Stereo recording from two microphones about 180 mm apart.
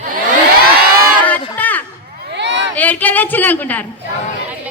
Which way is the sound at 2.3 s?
80° right.